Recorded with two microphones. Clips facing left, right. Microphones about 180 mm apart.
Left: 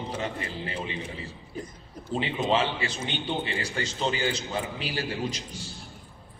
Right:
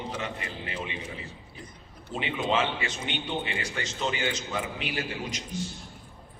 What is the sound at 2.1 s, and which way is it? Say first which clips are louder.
A man's voice: left 2 dB; 35° left (ahead or behind).